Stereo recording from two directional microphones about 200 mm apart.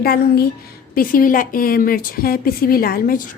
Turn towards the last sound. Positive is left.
turn(degrees=45)  # may be behind; listen again after turning